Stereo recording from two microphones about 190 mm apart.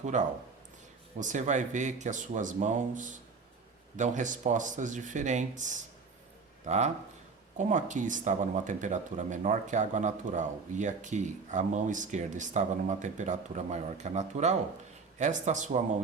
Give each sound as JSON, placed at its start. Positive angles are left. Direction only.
{"t": 0.0, "sound": "speech", "side_deg": -40}